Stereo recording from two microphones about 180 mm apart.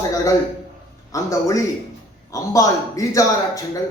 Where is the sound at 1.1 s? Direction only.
20° left (ahead or behind).